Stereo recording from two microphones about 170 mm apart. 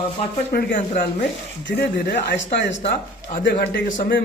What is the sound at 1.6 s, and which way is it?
Speech, 80° left.